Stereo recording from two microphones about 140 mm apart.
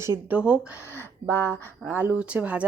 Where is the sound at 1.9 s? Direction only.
15° right (ahead or behind).